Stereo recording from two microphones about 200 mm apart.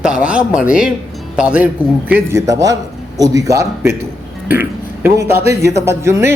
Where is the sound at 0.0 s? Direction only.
5° right (ahead or behind).